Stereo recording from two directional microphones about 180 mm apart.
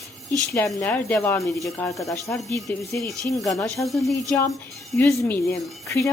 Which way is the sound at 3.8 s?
Centre (ahead or behind).